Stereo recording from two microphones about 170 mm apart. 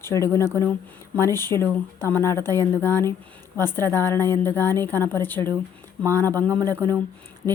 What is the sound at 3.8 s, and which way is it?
Speech, 20° right (ahead or behind).